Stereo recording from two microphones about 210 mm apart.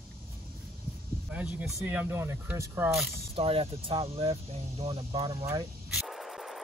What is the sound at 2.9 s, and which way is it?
Speech, centre (ahead or behind).